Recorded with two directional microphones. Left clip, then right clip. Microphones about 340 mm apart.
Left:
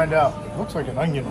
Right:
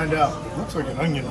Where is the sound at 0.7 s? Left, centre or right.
Centre.